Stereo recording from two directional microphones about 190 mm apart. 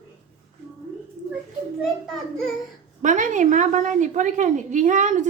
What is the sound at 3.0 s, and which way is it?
A woman's voice, 40° right (ahead or behind).